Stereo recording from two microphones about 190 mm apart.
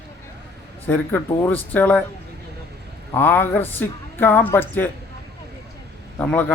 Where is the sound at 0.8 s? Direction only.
10° left (ahead or behind).